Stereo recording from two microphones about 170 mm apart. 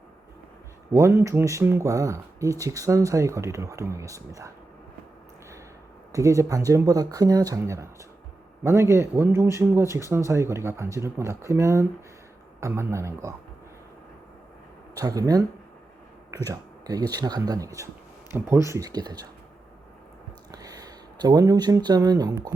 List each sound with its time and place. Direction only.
0.9 s speech: 15° right (ahead or behind)
6.1 s speech: 20° right (ahead or behind)
14.9 s speech: 20° right (ahead or behind)
16.5 s speech: 20° right (ahead or behind)
20.5 s speech: 20° right (ahead or behind)